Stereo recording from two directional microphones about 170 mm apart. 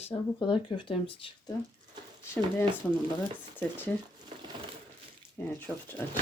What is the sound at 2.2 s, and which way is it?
Speech, 10° left (ahead or behind).